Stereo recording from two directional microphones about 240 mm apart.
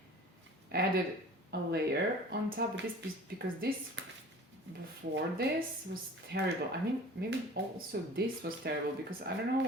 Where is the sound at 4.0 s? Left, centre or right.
Right.